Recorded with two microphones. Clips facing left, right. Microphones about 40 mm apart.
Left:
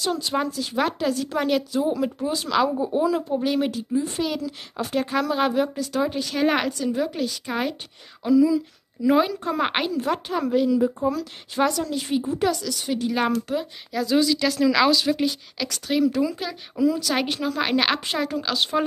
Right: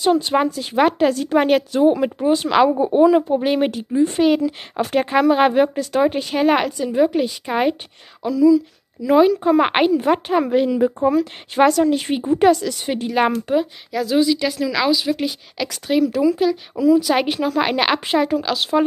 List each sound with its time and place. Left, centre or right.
0.0 s a woman's voice: right
6.3 s a woman's voice: centre
6.9 s a woman's voice: right
8.3 s speech: centre
9.4 s a woman's voice: centre; by 13.1 s right
13.5 s a woman's voice: right
13.9 s a woman's voice: centre
14.6 s a woman's voice: centre